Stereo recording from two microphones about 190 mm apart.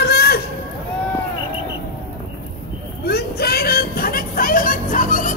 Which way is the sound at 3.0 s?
55° left (ahead or behind).